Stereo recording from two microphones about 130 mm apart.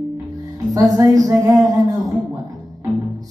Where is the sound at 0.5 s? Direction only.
25° right (ahead or behind).